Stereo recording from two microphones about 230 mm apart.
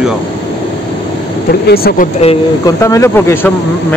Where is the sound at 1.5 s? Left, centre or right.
Left.